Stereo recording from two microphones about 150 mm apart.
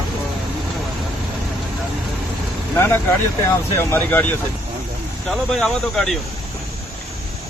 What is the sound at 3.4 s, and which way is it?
Speech, 15° left (ahead or behind).